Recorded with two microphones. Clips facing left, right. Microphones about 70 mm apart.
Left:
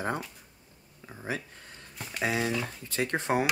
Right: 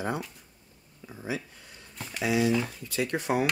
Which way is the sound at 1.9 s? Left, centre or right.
Centre.